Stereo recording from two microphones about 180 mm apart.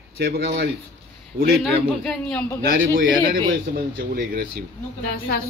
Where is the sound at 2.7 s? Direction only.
90° right.